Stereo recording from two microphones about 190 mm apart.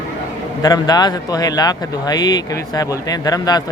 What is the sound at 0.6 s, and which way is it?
Speech, 20° left (ahead or behind).